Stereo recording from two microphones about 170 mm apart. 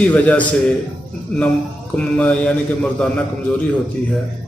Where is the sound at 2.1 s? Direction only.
Centre (ahead or behind).